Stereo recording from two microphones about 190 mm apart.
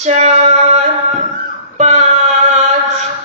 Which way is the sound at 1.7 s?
35° right (ahead or behind).